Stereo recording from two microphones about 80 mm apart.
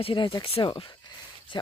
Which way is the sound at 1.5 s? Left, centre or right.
Left.